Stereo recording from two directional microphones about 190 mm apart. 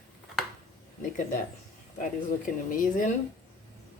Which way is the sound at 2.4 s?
45° left (ahead or behind).